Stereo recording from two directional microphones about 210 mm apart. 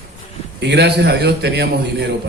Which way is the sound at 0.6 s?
55° right (ahead or behind).